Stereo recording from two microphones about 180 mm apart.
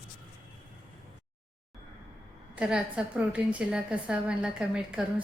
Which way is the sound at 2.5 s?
5° right (ahead or behind).